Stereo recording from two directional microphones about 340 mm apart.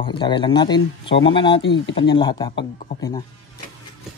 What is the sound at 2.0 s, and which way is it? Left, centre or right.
Speech, centre.